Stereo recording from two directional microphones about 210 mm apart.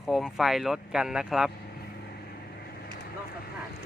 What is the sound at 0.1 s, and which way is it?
Speech, centre (ahead or behind).